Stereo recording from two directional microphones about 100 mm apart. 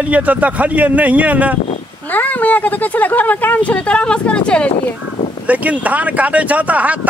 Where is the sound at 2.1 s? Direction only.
15° left (ahead or behind).